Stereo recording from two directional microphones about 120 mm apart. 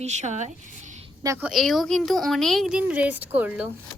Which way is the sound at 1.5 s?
Centre (ahead or behind).